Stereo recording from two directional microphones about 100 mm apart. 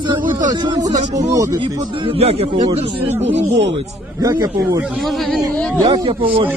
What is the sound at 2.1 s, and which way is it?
Speech, 85° right.